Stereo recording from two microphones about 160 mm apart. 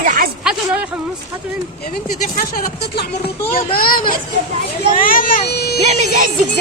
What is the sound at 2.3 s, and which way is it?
Speech, 75° left (ahead or behind).